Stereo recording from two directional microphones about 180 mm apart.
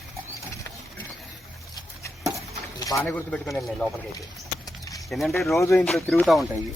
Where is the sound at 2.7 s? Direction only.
20° left (ahead or behind).